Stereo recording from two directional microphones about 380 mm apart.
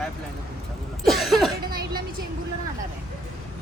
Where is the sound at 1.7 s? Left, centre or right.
Right.